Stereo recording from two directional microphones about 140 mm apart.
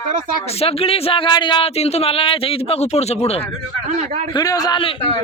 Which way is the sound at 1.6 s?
50° left (ahead or behind).